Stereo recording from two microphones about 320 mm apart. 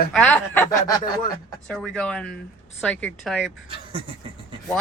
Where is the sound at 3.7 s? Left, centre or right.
Centre.